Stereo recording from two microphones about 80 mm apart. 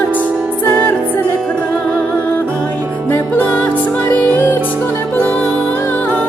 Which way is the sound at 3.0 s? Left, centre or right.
Left.